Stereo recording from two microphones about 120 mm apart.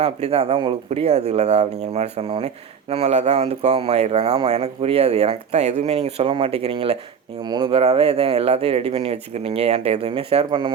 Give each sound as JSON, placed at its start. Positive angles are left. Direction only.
{"t": 0.0, "sound": "speech", "side_deg": -60}
{"t": 7.4, "sound": "speech", "side_deg": -35}
{"t": 7.7, "sound": "speech", "side_deg": -50}